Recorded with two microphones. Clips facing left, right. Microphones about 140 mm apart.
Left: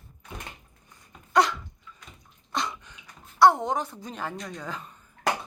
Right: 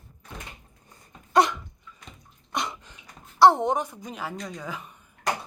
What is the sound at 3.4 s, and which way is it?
Speech, 25° right (ahead or behind).